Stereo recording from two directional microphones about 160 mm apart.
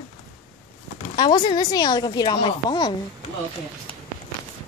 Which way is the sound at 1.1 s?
25° left (ahead or behind).